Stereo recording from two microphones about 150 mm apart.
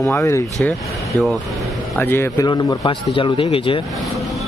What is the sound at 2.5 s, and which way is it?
Speech, 30° left (ahead or behind).